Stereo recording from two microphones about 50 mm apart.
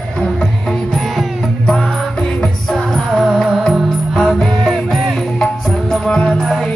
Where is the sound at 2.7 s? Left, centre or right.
Centre.